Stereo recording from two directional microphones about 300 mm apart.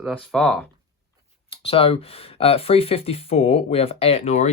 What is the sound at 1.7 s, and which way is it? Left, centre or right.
Speech, centre.